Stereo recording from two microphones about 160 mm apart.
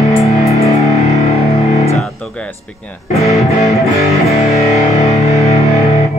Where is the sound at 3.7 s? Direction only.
Centre (ahead or behind).